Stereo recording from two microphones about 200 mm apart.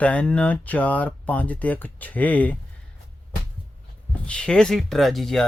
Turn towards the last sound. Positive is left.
turn(degrees=0)  # may be behind; listen again after turning